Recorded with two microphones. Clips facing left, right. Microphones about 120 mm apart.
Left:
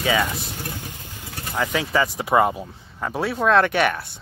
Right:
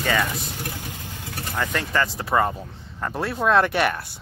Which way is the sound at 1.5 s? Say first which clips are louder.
Left 3 dB; 5° left (ahead or behind).